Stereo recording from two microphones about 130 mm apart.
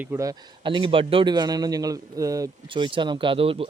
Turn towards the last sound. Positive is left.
turn(degrees=-45)  # may be behind; listen again after turning